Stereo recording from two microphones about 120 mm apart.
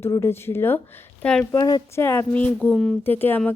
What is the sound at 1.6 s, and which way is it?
Speech, 35° left (ahead or behind).